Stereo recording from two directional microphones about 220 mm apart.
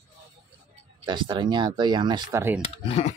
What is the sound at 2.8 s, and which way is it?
Speech, 30° left (ahead or behind).